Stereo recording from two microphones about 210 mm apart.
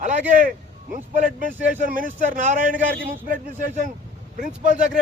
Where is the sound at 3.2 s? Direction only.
40° right (ahead or behind).